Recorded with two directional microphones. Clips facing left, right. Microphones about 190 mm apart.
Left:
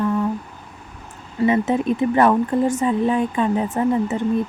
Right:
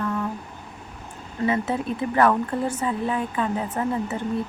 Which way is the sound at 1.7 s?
20° left (ahead or behind).